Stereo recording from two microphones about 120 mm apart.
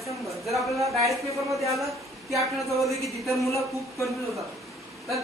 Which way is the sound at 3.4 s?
25° left (ahead or behind).